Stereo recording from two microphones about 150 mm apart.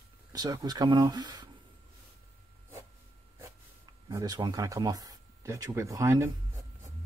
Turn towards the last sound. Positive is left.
turn(degrees=-20)  # may be behind; listen again after turning